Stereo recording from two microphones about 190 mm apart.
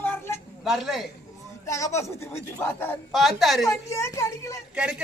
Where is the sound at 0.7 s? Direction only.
Centre (ahead or behind).